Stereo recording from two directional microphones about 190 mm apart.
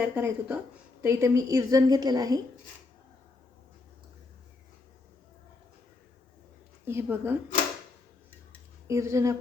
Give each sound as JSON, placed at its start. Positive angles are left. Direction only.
{"t": 0.0, "sound": "a woman's voice", "side_deg": -5}
{"t": 6.8, "sound": "speech", "side_deg": -10}
{"t": 8.9, "sound": "speech", "side_deg": -15}